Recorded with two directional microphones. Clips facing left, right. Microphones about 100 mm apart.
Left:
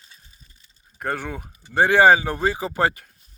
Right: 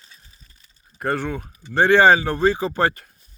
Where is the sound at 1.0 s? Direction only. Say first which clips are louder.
Right 4 dB; 5° left (ahead or behind).